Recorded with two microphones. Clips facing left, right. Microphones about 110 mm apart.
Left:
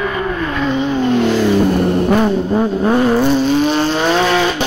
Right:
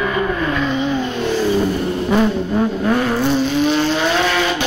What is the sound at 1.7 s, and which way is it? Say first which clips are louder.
Vehicle: left 5 dB; 60° left (ahead or behind).